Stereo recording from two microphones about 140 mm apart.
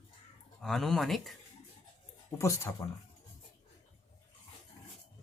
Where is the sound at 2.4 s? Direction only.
20° left (ahead or behind).